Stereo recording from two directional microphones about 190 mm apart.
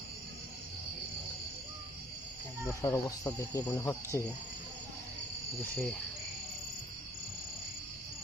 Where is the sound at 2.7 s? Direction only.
15° left (ahead or behind).